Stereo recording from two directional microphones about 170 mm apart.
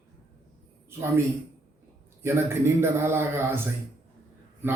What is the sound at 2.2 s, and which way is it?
A man's voice, 15° right (ahead or behind).